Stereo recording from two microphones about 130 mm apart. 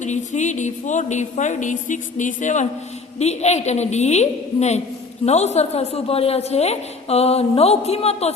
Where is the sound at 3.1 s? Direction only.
55° left (ahead or behind).